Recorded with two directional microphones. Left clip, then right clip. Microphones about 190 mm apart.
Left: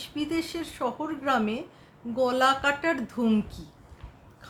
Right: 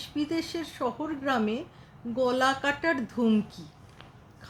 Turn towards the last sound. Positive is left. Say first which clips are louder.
# even
turn(degrees=-5)  # may be behind; listen again after turning